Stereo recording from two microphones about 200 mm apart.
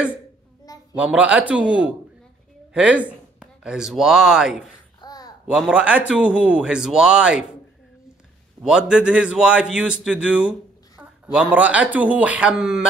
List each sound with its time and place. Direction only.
0.9 s speech: 5° right (ahead or behind)
5.0 s babbling: 20° left (ahead or behind)
5.5 s speech: centre (ahead or behind)
8.6 s speech: 5° right (ahead or behind)